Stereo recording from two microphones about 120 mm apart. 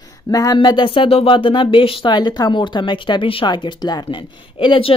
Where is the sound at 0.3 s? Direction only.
30° left (ahead or behind).